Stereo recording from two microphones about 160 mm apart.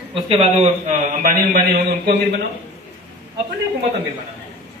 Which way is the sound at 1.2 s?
55° right (ahead or behind).